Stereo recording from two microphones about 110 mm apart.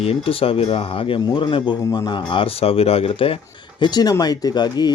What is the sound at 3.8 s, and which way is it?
Speech, 40° left (ahead or behind).